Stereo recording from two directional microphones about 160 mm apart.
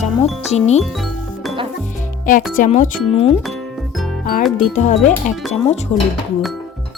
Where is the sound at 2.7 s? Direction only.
40° left (ahead or behind).